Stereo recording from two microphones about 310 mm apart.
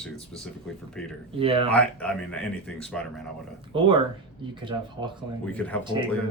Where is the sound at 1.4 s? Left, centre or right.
Centre.